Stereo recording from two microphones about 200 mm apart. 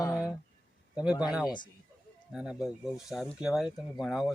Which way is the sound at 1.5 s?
20° left (ahead or behind).